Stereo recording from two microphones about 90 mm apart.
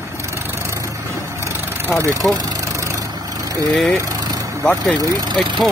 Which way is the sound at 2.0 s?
35° right (ahead or behind).